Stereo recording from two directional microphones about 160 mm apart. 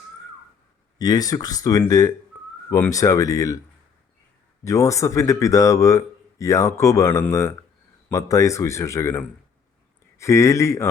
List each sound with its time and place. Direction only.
0.9 s speech: 25° left (ahead or behind)
4.6 s speech: 20° left (ahead or behind)